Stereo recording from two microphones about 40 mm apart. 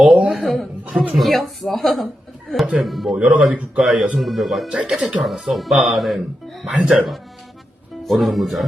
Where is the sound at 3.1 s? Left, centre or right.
Right.